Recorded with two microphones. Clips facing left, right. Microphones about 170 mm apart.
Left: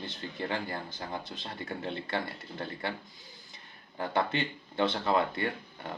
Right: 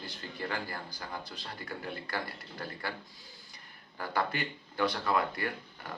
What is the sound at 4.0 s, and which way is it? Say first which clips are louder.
Speech: left 3 dB; 25° left (ahead or behind).